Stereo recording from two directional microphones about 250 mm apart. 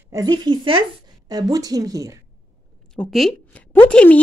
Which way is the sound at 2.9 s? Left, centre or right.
Centre.